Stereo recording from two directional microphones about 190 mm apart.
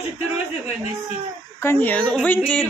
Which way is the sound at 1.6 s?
10° left (ahead or behind).